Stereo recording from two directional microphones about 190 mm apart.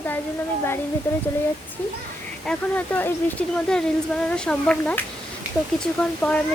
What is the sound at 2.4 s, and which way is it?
A woman's voice, 5° left (ahead or behind).